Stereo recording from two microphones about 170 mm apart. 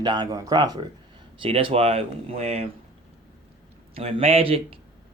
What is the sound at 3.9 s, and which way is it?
Speech, 35° right (ahead or behind).